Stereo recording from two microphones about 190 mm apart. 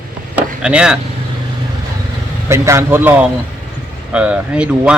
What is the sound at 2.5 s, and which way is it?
Speech, 15° right (ahead or behind).